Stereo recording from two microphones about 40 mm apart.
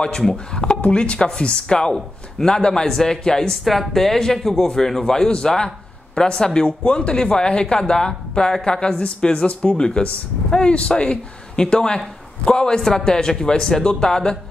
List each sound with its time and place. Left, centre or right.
0.0 s a man's voice: centre
0.7 s a man's voice: left
3.6 s a man's voice: centre